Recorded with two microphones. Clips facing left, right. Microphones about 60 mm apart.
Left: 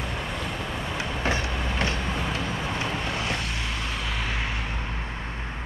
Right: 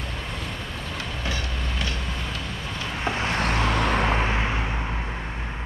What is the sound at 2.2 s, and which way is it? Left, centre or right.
Vehicle, left.